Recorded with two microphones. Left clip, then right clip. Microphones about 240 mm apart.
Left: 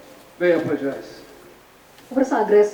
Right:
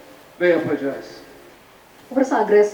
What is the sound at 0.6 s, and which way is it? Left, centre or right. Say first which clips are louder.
Speech: right 1 dB; centre.